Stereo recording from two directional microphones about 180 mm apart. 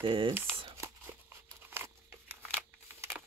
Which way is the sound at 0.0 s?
30° right (ahead or behind).